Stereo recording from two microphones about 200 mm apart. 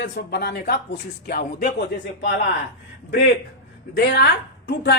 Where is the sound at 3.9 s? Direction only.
55° left (ahead or behind).